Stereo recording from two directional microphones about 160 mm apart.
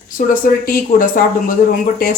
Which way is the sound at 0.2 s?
60° left (ahead or behind).